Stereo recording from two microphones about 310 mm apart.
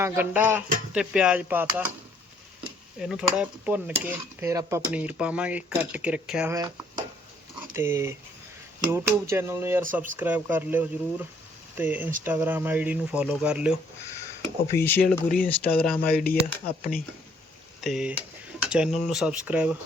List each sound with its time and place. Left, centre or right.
0.0 s speech: centre
3.0 s speech: centre
14.8 s speech: centre
16.1 s speech: left
17.7 s speech: centre